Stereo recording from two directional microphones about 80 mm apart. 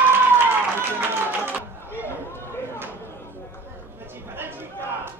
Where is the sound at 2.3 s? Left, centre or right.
Left.